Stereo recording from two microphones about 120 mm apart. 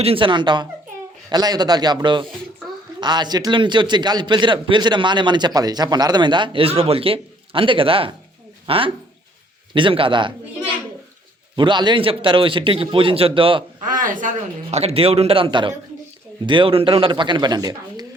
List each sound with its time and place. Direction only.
0.0 s a man's voice: 50° right (ahead or behind)
11.5 s a man's voice: 40° right (ahead or behind)
13.8 s a man's voice: 90° right; by 18.0 s 35° right (ahead or behind)